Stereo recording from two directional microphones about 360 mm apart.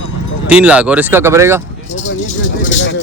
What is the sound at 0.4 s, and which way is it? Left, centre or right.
Speech, centre.